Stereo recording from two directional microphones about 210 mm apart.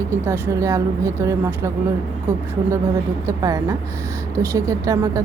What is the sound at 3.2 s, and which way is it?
Speech, 15° right (ahead or behind).